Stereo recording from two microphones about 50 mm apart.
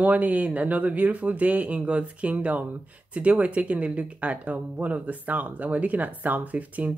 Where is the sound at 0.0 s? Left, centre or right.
Right.